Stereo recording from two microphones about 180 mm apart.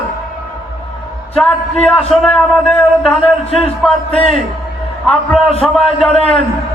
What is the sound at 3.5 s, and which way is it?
Speech, 35° left (ahead or behind).